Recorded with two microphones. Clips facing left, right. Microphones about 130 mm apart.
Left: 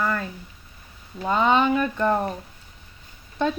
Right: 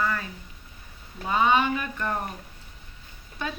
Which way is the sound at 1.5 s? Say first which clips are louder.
Left 5 dB; 35° left (ahead or behind).